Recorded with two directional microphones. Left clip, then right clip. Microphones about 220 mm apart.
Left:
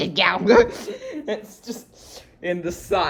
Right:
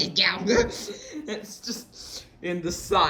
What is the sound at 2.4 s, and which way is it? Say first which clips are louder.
Speech: left 4 dB; 5° right (ahead or behind).